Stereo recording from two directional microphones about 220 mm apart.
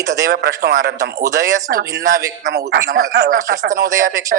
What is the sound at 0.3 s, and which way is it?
Speech, 45° right (ahead or behind).